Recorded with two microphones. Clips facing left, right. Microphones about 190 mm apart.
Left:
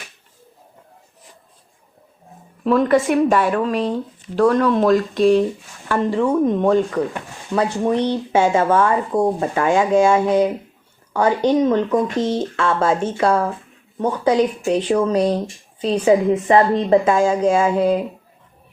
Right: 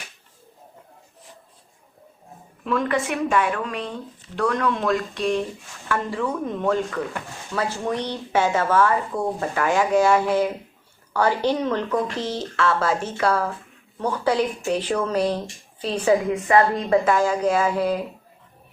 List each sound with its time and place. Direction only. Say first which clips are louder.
2.6 s speech: left 8 dB; 35° left (ahead or behind)